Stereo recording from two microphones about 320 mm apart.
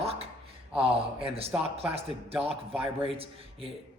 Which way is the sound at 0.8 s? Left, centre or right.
Centre.